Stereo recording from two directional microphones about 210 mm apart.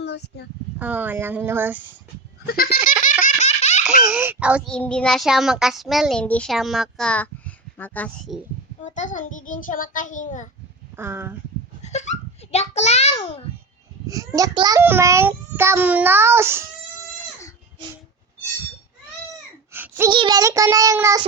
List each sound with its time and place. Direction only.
0.8 s a child's voice: 10° right (ahead or behind)
2.5 s goat: 45° left (ahead or behind)
3.0 s baby laughter: 40° left (ahead or behind)
4.0 s a child's voice: 5° right (ahead or behind)
4.7 s a child's voice: 5° left (ahead or behind)
8.8 s a child's voice: 35° left (ahead or behind)
10.9 s a child's voice: 10° right (ahead or behind)
11.8 s a child's voice: 35° left (ahead or behind)
14.1 s a child's voice: 15° right (ahead or behind)
19.7 s a sound: 10° right (ahead or behind)
20.1 s a child's voice: 20° right (ahead or behind)